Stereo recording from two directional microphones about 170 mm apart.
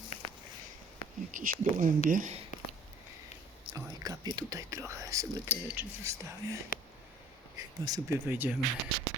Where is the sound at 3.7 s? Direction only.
20° right (ahead or behind).